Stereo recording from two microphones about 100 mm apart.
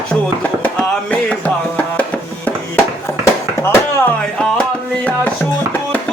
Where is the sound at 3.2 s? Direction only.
25° left (ahead or behind).